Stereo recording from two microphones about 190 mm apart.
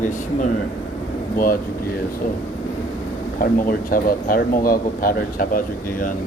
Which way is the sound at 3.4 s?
50° left (ahead or behind).